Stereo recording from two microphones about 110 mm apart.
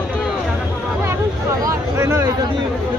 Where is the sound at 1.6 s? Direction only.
30° right (ahead or behind).